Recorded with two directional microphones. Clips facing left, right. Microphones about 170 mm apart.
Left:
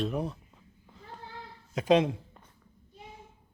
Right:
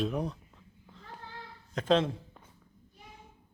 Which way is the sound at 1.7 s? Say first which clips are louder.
Left 3 dB; 10° left (ahead or behind).